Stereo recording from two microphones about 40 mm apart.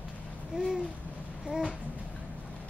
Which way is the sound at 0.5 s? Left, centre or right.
Centre.